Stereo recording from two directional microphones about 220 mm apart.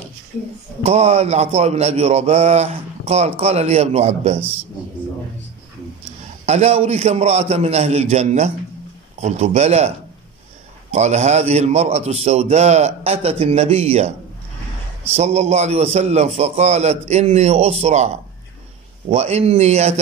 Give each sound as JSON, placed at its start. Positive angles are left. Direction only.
{"t": 0.8, "sound": "a man's voice", "side_deg": -30}
{"t": 6.4, "sound": "a man's voice", "side_deg": -30}
{"t": 15.1, "sound": "a man's voice", "side_deg": -30}